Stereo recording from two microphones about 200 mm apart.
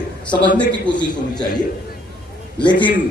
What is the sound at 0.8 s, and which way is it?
Speech, 20° left (ahead or behind).